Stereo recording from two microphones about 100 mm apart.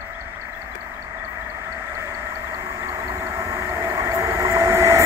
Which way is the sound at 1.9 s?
30° right (ahead or behind).